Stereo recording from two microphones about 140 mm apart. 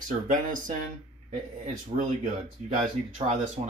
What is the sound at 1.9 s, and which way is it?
Speech, 65° right (ahead or behind).